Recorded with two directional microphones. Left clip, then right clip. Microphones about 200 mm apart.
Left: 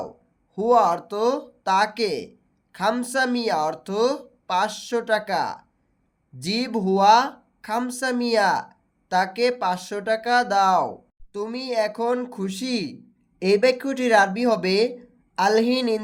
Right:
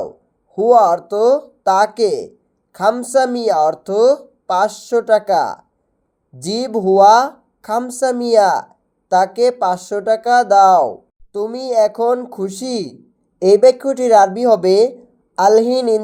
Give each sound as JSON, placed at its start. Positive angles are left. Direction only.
{"t": 0.5, "sound": "speech", "side_deg": -5}